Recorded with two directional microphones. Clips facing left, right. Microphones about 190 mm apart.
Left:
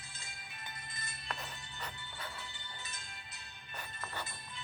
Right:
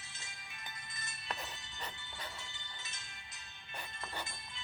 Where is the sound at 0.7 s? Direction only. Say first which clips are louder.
Left 2 dB; 35° left (ahead or behind).